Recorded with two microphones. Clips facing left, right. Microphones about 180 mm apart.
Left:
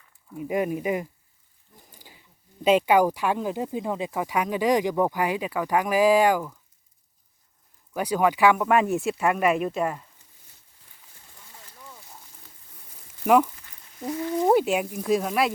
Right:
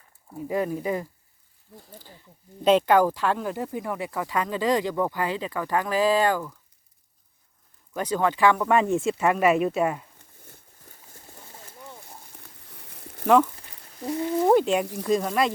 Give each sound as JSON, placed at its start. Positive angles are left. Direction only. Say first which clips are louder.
{"t": 0.4, "sound": "speech", "louder": "left 1 dB", "side_deg": 15}
{"t": 1.9, "sound": "wild animals", "louder": "right 5 dB", "side_deg": 10}
{"t": 2.6, "sound": "speech", "louder": "even", "side_deg": 10}
{"t": 7.9, "sound": "speech", "louder": "left 2 dB", "side_deg": 10}
{"t": 10.2, "sound": "a sound", "louder": "right 9 dB", "side_deg": -55}
{"t": 12.6, "sound": "a sound", "louder": "right 8 dB", "side_deg": -75}
{"t": 13.2, "sound": "speech", "louder": "even", "side_deg": 10}